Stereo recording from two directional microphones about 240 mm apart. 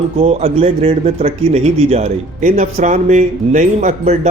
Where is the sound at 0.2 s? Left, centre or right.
Right.